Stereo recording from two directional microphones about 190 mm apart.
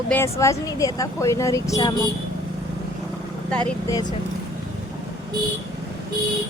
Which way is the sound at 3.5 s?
5° left (ahead or behind).